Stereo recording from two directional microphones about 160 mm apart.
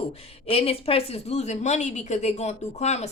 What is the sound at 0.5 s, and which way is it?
Speech, 35° left (ahead or behind).